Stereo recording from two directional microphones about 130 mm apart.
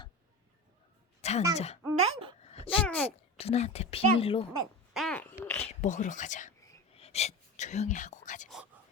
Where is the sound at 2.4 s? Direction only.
55° left (ahead or behind).